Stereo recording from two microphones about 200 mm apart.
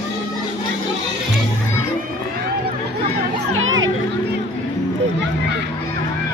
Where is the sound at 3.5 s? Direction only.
80° right.